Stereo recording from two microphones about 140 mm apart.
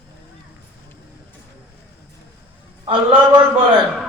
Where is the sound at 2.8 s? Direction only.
40° right (ahead or behind).